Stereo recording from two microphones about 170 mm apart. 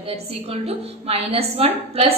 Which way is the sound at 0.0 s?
35° right (ahead or behind).